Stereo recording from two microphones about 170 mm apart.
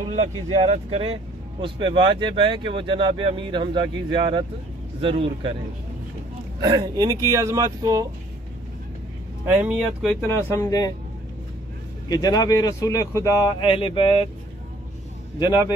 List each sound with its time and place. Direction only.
0.1 s speech: 40° right (ahead or behind)
6.6 s speech: 20° right (ahead or behind)
10.0 s speech: 15° left (ahead or behind)
12.1 s speech: 20° left (ahead or behind)
15.3 s speech: 25° left (ahead or behind)